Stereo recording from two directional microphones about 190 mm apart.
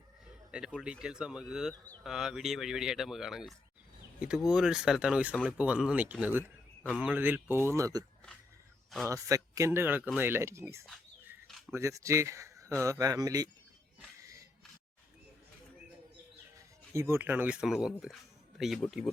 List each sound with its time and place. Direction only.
0.3 s speech: 5° right (ahead or behind)
9.0 s speech: 15° right (ahead or behind)
11.4 s a sound: centre (ahead or behind)
11.7 s speech: 15° right (ahead or behind)
14.2 s a sound: 15° right (ahead or behind)
16.6 s speech: 15° right (ahead or behind)